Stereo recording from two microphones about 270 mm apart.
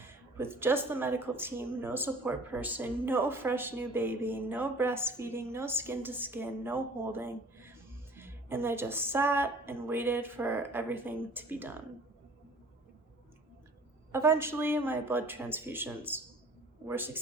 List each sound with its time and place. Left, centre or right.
0.0 s speech: centre
14.1 s speech: centre